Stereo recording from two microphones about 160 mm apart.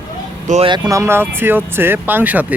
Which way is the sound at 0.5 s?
50° right (ahead or behind).